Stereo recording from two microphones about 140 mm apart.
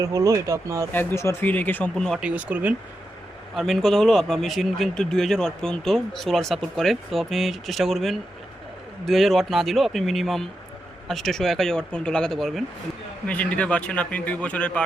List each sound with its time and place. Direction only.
0.0 s speech: 20° right (ahead or behind)
0.9 s a man's voice: 20° left (ahead or behind); by 2.2 s 5° left (ahead or behind)
2.2 s speech: 10° right (ahead or behind)
3.5 s a man's voice: centre (ahead or behind)